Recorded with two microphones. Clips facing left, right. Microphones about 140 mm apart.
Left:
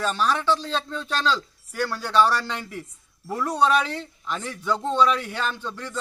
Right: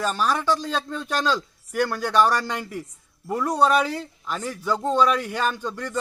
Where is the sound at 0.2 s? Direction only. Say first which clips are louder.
Left 1 dB; 10° right (ahead or behind).